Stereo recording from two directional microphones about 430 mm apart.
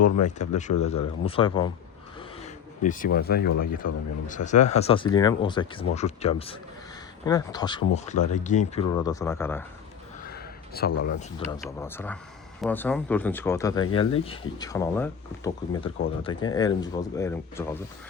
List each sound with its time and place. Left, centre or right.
0.2 s speech: centre
10.2 s a sound: left
11.0 s speech: centre